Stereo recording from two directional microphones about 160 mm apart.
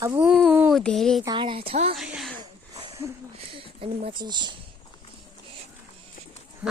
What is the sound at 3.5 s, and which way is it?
Speech, 35° right (ahead or behind).